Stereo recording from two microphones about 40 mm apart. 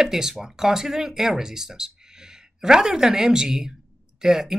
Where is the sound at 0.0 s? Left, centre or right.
Centre.